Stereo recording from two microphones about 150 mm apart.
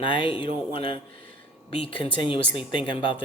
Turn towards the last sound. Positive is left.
turn(degrees=35)  # may be behind; listen again after turning